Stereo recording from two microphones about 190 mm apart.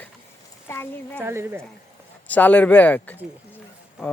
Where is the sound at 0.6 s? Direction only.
10° left (ahead or behind).